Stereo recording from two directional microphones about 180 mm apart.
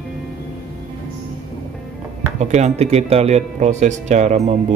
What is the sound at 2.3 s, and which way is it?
A man's voice, 40° right (ahead or behind).